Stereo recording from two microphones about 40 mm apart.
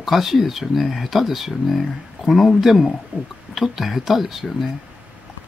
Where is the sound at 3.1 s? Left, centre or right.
Right.